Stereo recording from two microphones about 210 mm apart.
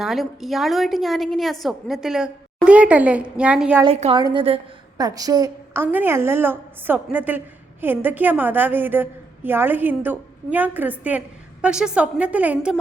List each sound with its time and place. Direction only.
0.0 s a woman's voice: centre (ahead or behind)
3.8 s a woman's voice: 30° right (ahead or behind); by 12.8 s 5° right (ahead or behind)